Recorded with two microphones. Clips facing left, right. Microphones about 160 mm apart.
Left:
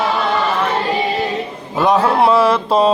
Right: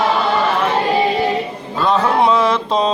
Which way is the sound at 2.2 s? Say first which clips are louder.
Left 2 dB; 5° left (ahead or behind).